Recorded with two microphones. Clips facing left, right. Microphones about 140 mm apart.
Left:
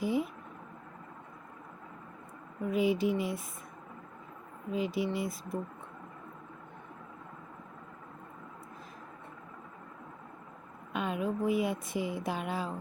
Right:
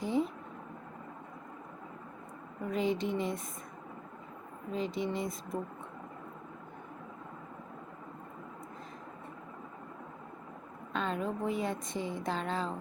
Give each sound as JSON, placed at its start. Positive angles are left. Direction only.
{"t": 0.0, "sound": "a sound", "side_deg": 10}
{"t": 2.6, "sound": "speech", "side_deg": 5}
{"t": 4.7, "sound": "speech", "side_deg": 5}
{"t": 10.9, "sound": "speech", "side_deg": 10}